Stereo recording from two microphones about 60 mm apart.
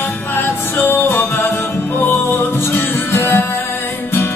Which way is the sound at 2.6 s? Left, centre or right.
Left.